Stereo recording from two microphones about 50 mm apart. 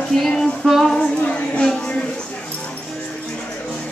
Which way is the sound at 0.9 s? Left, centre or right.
Centre.